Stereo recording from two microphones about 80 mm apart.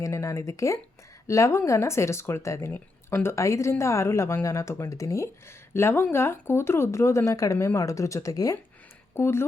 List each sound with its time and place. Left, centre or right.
0.0 s speech: left
9.1 s speech: left